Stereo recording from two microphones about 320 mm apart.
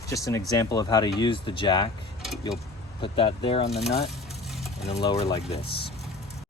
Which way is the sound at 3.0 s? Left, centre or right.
Centre.